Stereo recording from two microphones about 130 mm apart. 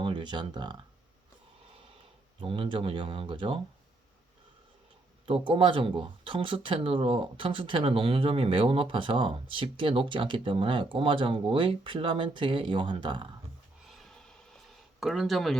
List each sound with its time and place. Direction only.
0.0 s speech: 35° right (ahead or behind)
2.4 s speech: 40° right (ahead or behind)
5.5 s speech: 40° right (ahead or behind)
13.8 s a sound: centre (ahead or behind)